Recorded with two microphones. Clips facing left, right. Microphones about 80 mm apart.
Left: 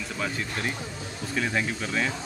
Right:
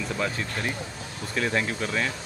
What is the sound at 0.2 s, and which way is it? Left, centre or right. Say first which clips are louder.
Speech: left 1 dB; centre.